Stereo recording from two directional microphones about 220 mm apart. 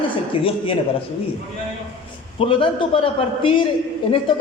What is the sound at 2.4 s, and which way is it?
A woman's voice, 25° left (ahead or behind).